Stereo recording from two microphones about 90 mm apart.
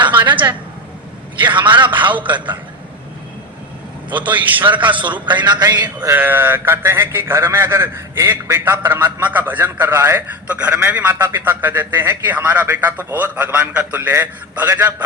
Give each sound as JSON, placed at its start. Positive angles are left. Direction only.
{"t": 0.0, "sound": "a sound", "side_deg": -60}
{"t": 1.4, "sound": "a man's voice", "side_deg": -65}
{"t": 4.1, "sound": "a man's voice", "side_deg": -65}
{"t": 6.1, "sound": "a man's voice", "side_deg": -20}
{"t": 10.5, "sound": "a man's voice", "side_deg": -15}